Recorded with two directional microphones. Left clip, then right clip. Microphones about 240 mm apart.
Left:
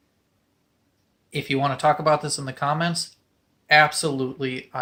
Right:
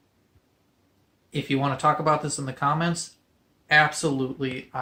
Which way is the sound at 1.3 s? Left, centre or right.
Left.